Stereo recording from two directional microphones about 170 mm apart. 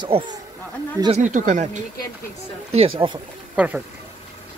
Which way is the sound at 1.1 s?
45° right (ahead or behind).